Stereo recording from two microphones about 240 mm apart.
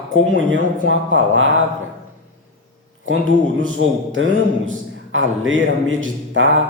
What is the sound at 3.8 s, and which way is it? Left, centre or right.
Speech, right.